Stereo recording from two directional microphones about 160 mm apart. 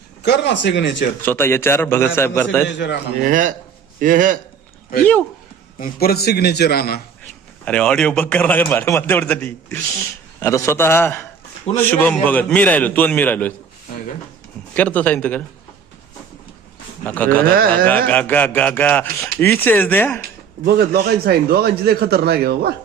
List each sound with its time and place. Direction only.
0.2 s speech: 90° left
1.2 s a man's voice: 15° left (ahead or behind)
2.6 s speech: 90° left
3.2 s speech: 55° right (ahead or behind)
5.8 s a man's voice: 75° left (ahead or behind)
7.6 s a man's voice: 5° left (ahead or behind)
14.8 s a man's voice: 10° left (ahead or behind)
17.0 s speech: 10° left (ahead or behind)
17.4 s speech: 65° right (ahead or behind)
17.8 s a man's voice: 10° left (ahead or behind)
20.7 s speech: 85° right